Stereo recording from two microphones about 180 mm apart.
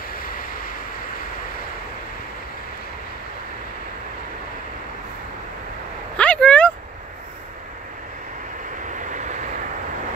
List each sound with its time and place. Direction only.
0.2 s vehicle: 50° left (ahead or behind)
6.1 s a sound: 5° left (ahead or behind)
8.8 s vehicle: 45° right (ahead or behind)